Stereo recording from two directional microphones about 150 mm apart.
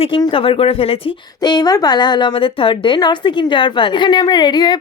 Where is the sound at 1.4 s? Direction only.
25° left (ahead or behind).